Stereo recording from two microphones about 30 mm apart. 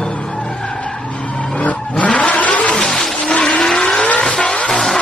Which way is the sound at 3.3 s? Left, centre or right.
Left.